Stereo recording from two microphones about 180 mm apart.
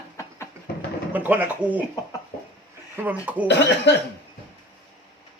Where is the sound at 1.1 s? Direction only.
10° right (ahead or behind).